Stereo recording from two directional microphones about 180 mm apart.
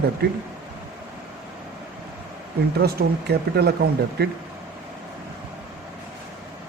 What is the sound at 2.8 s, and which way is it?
Speech, 60° right (ahead or behind).